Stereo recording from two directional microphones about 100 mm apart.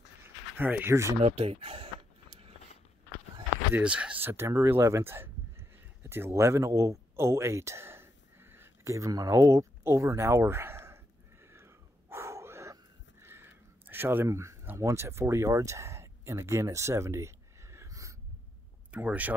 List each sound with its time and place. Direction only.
0.2 s a sound: 20° right (ahead or behind)
1.2 s speech: 90° right
3.7 s speech: 10° right (ahead or behind)
11.4 s a sound: 25° right (ahead or behind)
14.8 s speech: 30° right (ahead or behind)
18.9 s speech: 15° right (ahead or behind)